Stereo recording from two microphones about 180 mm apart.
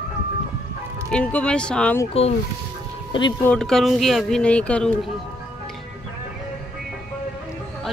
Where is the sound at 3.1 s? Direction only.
25° left (ahead or behind).